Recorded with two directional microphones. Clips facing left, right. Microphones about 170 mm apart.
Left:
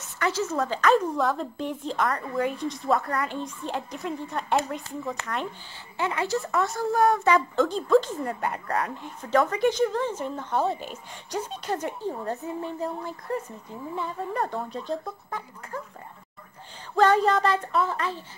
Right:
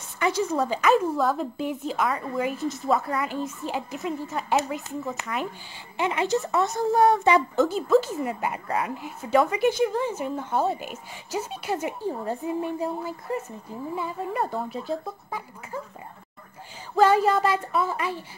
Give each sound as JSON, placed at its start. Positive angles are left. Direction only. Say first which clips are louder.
{"t": 0.2, "sound": "a woman's voice", "louder": "right 2 dB", "side_deg": -15}
{"t": 5.9, "sound": "speech", "louder": "right 3 dB", "side_deg": -20}
{"t": 7.5, "sound": "a woman's voice", "louder": "right 1 dB", "side_deg": -5}
{"t": 16.9, "sound": "a woman's voice", "louder": "right 1 dB", "side_deg": -5}